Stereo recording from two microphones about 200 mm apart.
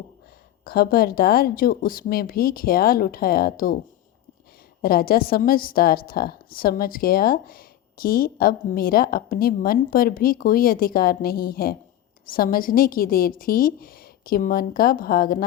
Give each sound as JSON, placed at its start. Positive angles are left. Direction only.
{"t": 0.6, "sound": "a woman's voice", "side_deg": 50}
{"t": 4.8, "sound": "a woman's voice", "side_deg": 50}